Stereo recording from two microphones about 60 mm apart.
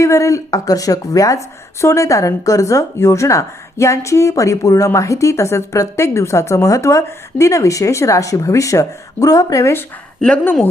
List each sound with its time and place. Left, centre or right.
0.0 s a woman's voice: left
10.2 s speech: centre